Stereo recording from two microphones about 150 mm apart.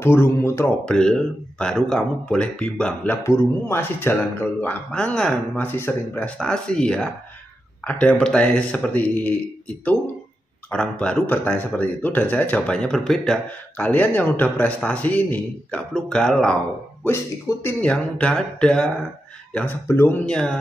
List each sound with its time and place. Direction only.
0.0 s speech: 15° left (ahead or behind)
0.8 s speech: 5° left (ahead or behind)
17.6 s speech: 10° left (ahead or behind)